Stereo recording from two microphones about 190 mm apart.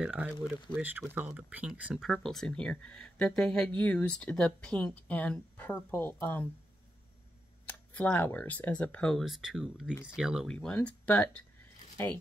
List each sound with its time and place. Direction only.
0.0 s speech: 5° right (ahead or behind); by 6.5 s 10° left (ahead or behind)
7.6 s speech: 5° left (ahead or behind)